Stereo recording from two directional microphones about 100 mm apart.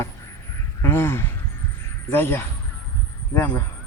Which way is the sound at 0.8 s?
25° left (ahead or behind).